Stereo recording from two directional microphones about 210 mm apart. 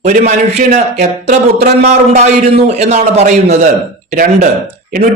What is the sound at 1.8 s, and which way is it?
A man's voice, 30° right (ahead or behind).